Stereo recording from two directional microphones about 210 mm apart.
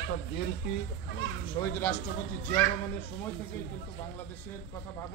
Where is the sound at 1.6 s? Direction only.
20° left (ahead or behind).